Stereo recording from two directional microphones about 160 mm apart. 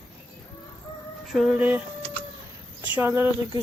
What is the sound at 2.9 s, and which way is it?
Speech, 15° right (ahead or behind).